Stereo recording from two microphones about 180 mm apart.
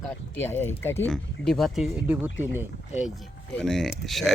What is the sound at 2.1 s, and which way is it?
Speech, 10° right (ahead or behind).